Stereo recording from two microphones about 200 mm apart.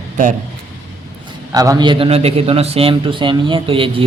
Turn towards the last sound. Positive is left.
turn(degrees=-25)  # may be behind; listen again after turning